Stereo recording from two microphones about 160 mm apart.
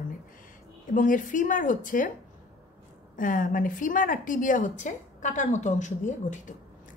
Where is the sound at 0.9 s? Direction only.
55° left (ahead or behind).